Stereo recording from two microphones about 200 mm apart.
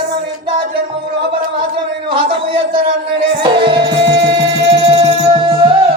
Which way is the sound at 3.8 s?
60° right (ahead or behind).